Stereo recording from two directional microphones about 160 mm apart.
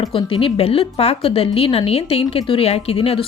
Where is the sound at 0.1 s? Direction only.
35° left (ahead or behind).